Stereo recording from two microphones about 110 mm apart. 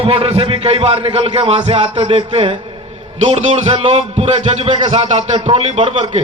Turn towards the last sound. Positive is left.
turn(degrees=-60)  # may be behind; listen again after turning